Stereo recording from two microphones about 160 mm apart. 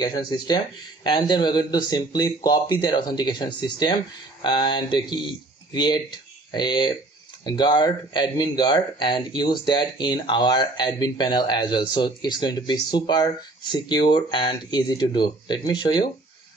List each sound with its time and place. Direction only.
0.0 s speech: 25° left (ahead or behind)